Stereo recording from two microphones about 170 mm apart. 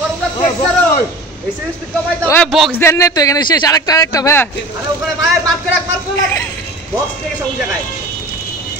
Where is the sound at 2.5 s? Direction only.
Centre (ahead or behind).